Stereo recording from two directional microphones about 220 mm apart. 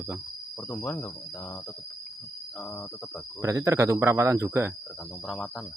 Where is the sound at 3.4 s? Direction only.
15° right (ahead or behind).